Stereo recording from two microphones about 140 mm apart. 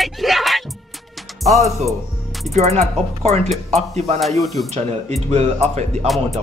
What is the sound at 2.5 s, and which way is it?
Speech, 50° right (ahead or behind).